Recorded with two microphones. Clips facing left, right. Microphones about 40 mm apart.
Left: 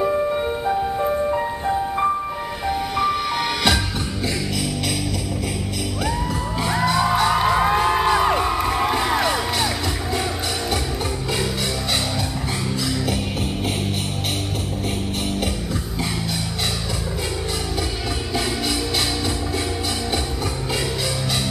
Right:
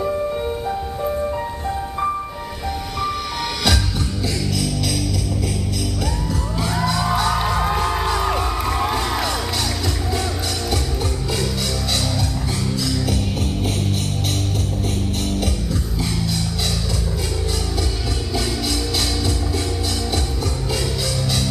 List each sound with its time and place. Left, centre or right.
0.0 s music: centre
6.6 s music: centre